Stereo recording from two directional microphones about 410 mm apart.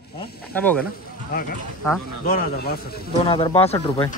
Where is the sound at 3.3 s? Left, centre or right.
Centre.